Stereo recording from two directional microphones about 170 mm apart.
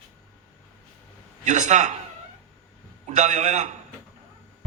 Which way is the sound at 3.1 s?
45° right (ahead or behind).